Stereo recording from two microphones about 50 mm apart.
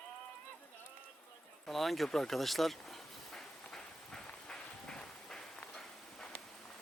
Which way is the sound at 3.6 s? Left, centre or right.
Centre.